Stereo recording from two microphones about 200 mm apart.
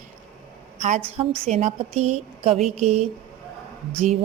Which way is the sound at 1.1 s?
30° right (ahead or behind).